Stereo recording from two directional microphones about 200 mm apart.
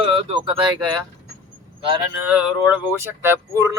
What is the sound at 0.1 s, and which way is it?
Speech, 25° right (ahead or behind).